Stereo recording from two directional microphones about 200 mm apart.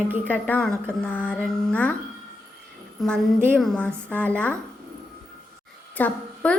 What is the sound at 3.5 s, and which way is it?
A woman's voice, 5° left (ahead or behind).